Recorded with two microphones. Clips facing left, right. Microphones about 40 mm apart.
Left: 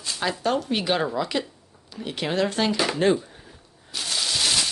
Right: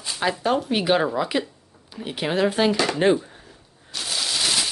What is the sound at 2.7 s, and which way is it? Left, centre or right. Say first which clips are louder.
Speech: right 2 dB; centre.